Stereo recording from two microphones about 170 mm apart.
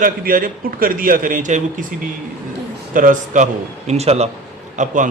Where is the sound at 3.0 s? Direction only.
50° right (ahead or behind).